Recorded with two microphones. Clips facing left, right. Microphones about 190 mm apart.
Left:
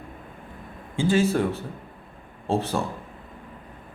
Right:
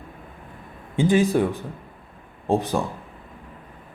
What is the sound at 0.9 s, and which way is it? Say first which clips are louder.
Speech: right 3 dB; 15° right (ahead or behind).